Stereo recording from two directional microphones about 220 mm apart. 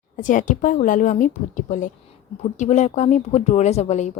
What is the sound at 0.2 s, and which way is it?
Speech, 35° left (ahead or behind).